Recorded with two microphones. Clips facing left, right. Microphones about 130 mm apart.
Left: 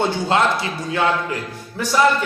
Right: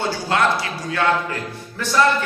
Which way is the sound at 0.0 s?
20° left (ahead or behind).